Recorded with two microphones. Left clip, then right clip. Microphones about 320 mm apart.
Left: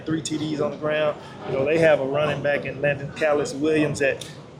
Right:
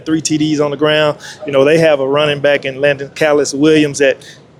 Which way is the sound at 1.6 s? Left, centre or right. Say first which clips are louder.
Right 7 dB; right.